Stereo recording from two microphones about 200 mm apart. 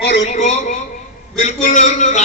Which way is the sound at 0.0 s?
60° left (ahead or behind).